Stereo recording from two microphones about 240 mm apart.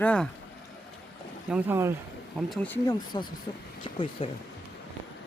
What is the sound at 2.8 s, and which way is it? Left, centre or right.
Speech, centre.